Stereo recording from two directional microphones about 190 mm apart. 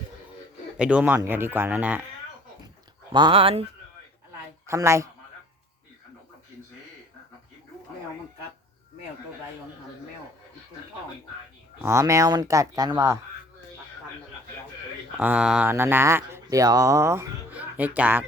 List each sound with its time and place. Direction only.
0.8 s speech: 5° right (ahead or behind)
3.1 s speech: 25° right (ahead or behind)
4.6 s speech: 15° right (ahead or behind)
11.8 s speech: 15° right (ahead or behind)
15.2 s speech: 5° right (ahead or behind)